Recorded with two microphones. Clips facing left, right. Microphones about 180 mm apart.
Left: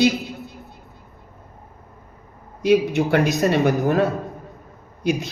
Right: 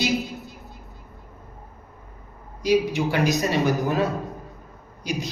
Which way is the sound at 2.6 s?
55° left (ahead or behind).